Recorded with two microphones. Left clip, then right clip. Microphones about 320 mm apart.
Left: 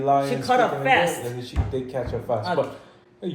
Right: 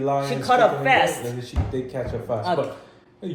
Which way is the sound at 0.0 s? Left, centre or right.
Left.